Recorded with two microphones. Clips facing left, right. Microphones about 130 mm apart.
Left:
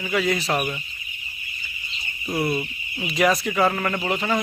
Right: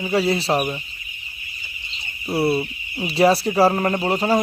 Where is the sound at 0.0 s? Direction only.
30° right (ahead or behind).